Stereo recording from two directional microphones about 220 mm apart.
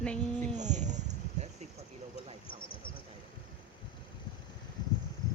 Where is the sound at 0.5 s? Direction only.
30° right (ahead or behind).